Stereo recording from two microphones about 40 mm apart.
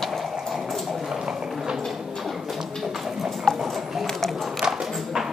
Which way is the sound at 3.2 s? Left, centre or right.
Centre.